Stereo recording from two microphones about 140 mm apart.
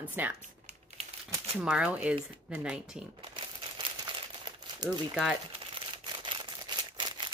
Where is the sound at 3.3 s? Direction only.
35° right (ahead or behind).